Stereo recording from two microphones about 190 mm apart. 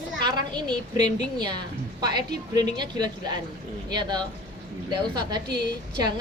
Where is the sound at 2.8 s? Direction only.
20° right (ahead or behind).